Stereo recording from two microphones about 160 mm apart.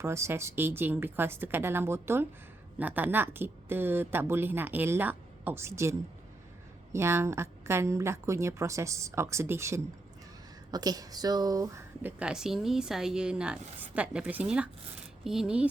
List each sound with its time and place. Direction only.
0.0 s a woman's voice: 15° right (ahead or behind)
12.2 s a woman's voice: 5° right (ahead or behind)